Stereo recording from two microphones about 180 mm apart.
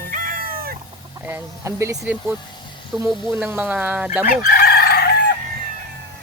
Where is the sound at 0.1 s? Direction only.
50° right (ahead or behind).